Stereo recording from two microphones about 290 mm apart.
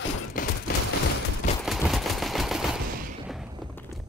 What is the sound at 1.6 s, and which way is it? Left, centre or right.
Gunshot, centre.